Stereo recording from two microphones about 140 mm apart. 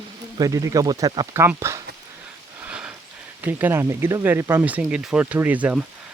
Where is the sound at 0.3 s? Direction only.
25° right (ahead or behind).